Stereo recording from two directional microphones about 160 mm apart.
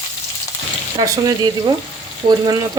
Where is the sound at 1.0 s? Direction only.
25° right (ahead or behind).